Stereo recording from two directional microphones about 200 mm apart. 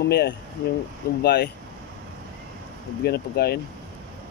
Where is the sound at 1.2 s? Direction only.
55° left (ahead or behind).